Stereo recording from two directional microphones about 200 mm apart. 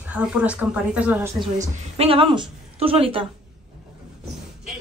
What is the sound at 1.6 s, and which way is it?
A woman's voice, 30° right (ahead or behind).